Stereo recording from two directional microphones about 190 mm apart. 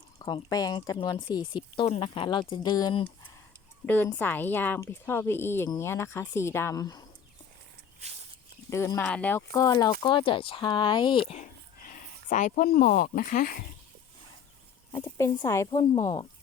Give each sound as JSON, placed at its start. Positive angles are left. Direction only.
{"t": 0.2, "sound": "speech", "side_deg": 25}
{"t": 3.8, "sound": "speech", "side_deg": 10}
{"t": 8.0, "sound": "walk", "side_deg": -35}
{"t": 8.7, "sound": "speech", "side_deg": 15}
{"t": 11.9, "sound": "speech", "side_deg": 45}
{"t": 14.9, "sound": "speech", "side_deg": 15}